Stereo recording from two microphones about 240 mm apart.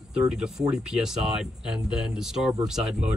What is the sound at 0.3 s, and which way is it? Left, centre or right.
Speech, centre.